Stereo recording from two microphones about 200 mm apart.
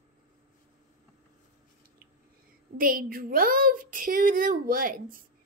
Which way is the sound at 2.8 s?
45° right (ahead or behind).